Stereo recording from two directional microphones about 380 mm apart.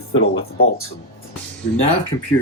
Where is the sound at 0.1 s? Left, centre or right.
Left.